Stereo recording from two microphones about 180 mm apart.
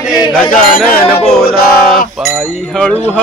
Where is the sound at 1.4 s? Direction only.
55° left (ahead or behind).